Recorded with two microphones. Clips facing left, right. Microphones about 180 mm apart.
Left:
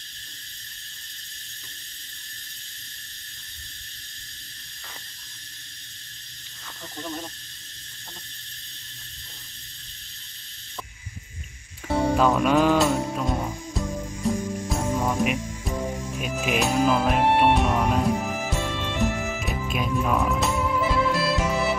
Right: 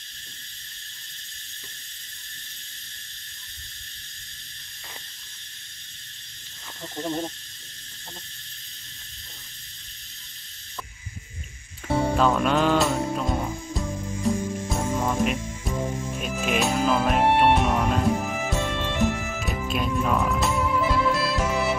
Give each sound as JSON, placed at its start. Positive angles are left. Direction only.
{"t": 7.0, "sound": "snake", "side_deg": -35}
{"t": 11.9, "sound": "music", "side_deg": 0}